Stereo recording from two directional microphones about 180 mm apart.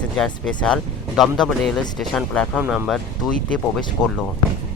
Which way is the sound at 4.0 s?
20° left (ahead or behind).